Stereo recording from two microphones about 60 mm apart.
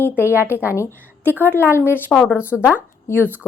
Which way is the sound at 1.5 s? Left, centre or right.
Left.